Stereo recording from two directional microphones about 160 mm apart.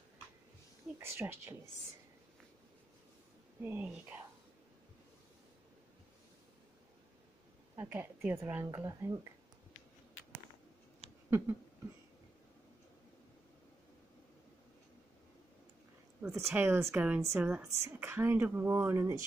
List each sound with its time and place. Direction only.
0.9 s speech: 15° right (ahead or behind)
3.6 s speech: 10° right (ahead or behind)
7.7 s speech: 15° right (ahead or behind)
11.2 s a sound: 15° right (ahead or behind)
16.3 s speech: 15° right (ahead or behind)